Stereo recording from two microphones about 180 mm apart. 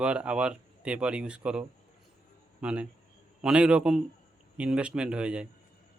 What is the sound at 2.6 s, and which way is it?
A man's voice, 5° right (ahead or behind).